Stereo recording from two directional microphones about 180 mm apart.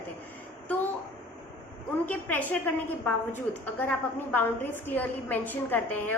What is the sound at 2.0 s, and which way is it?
A woman's voice, 10° left (ahead or behind).